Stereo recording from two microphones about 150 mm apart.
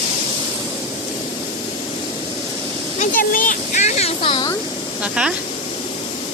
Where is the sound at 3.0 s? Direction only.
65° left (ahead or behind); by 4.5 s 35° left (ahead or behind).